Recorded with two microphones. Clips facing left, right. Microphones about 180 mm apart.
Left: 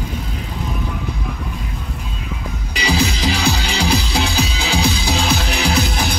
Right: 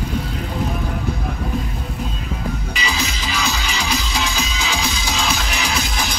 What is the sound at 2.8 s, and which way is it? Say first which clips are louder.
Music: left 10 dB; 65° left (ahead or behind).